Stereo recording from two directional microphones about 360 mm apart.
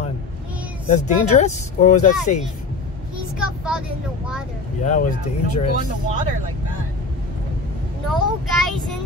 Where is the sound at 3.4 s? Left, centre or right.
Centre.